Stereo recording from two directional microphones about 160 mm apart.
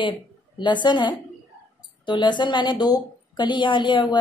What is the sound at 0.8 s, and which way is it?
A woman's voice, 30° left (ahead or behind).